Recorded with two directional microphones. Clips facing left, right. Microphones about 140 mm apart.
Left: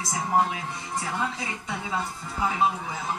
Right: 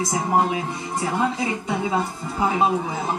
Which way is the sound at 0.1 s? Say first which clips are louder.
Right 2 dB; 20° right (ahead or behind).